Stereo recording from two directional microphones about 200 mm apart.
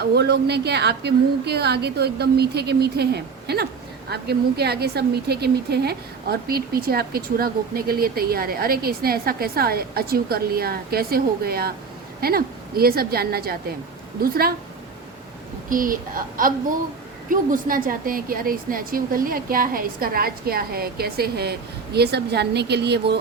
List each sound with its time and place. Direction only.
0.0 s a woman's voice: 55° right (ahead or behind)
15.7 s a woman's voice: 45° right (ahead or behind)